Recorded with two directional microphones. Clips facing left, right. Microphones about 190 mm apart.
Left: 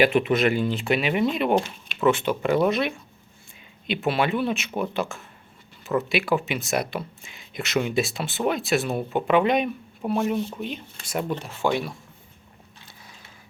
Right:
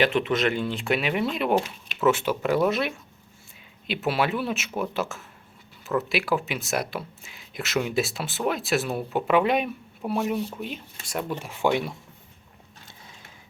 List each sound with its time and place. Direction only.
0.0 s speech: 10° left (ahead or behind)
11.3 s speech: 10° right (ahead or behind)